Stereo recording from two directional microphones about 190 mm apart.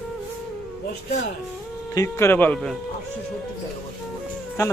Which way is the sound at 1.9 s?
15° left (ahead or behind).